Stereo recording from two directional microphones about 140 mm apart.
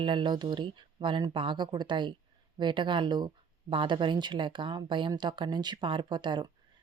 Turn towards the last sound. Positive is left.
turn(degrees=-35)  # may be behind; listen again after turning